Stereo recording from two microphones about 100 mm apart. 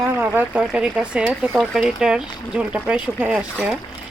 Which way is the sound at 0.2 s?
15° right (ahead or behind).